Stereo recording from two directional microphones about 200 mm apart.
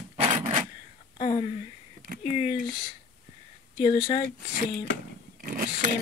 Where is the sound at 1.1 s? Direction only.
30° left (ahead or behind).